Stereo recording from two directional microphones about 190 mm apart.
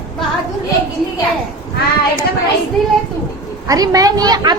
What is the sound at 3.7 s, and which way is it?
Speech, 20° right (ahead or behind).